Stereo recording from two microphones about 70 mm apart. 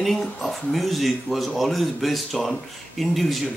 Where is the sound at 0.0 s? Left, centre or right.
Centre.